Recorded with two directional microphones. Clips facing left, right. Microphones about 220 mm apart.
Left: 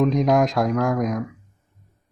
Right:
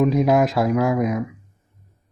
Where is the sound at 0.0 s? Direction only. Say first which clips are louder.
Right 1 dB; 5° right (ahead or behind).